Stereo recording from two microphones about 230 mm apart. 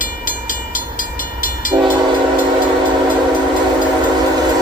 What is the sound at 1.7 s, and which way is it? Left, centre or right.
Train, centre.